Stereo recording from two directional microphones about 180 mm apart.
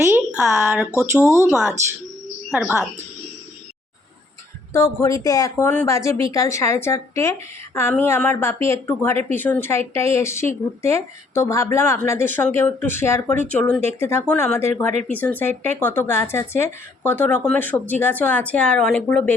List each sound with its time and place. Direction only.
0.0 s a sound: 10° right (ahead or behind)
0.9 s speech: 15° right (ahead or behind)
4.7 s a woman's voice: 15° left (ahead or behind)